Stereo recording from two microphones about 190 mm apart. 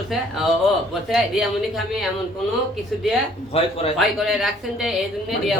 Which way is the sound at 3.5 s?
30° left (ahead or behind).